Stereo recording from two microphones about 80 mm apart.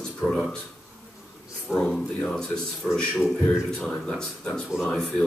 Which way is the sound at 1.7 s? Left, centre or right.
Centre.